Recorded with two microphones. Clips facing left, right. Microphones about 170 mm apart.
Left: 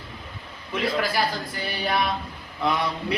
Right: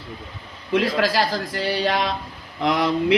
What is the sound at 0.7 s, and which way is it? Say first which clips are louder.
Speech: right 5 dB; 90° right.